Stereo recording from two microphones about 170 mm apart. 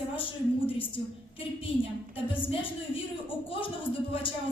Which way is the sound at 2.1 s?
30° left (ahead or behind).